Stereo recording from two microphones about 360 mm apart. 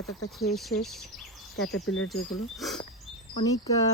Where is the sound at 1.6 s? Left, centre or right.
Left.